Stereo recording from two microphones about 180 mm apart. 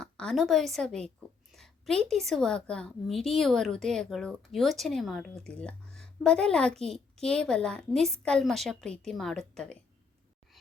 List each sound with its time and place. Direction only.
0.0 s a woman's voice: 5° left (ahead or behind)